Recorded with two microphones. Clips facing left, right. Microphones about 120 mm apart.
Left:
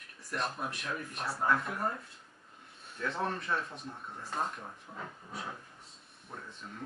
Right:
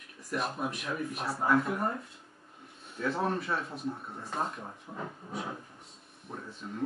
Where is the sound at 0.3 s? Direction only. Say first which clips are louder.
Right 3 dB; 5° right (ahead or behind).